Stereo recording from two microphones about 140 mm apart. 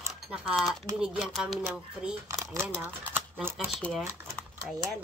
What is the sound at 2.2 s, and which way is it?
Speech, 25° right (ahead or behind).